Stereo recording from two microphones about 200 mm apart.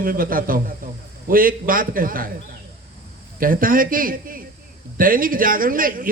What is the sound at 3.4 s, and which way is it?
A man's voice, 45° right (ahead or behind).